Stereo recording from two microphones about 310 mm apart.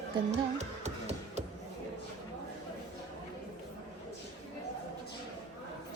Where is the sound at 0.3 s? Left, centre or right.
Right.